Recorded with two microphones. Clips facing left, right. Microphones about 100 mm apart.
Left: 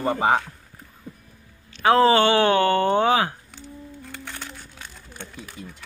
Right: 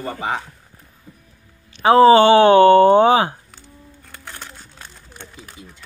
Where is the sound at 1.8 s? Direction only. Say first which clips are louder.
Right 6 dB; 20° right (ahead or behind).